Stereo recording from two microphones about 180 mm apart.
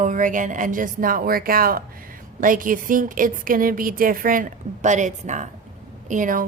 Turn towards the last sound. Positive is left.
turn(degrees=-45)  # may be behind; listen again after turning